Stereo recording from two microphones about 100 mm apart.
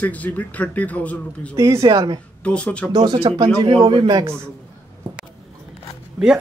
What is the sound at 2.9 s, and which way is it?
A woman's voice, 45° right (ahead or behind).